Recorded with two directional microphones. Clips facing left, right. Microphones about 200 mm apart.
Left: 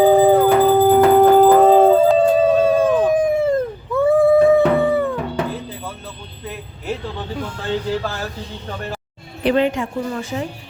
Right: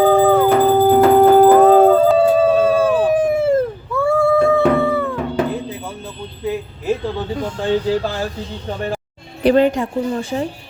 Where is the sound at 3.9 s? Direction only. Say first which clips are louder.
Left 3 dB; 20° left (ahead or behind).